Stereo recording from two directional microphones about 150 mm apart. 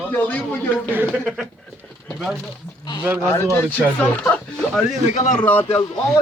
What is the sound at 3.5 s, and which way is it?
Speech, 10° left (ahead or behind).